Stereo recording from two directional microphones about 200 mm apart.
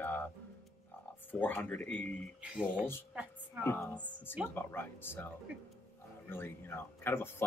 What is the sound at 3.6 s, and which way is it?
Speech, 10° left (ahead or behind).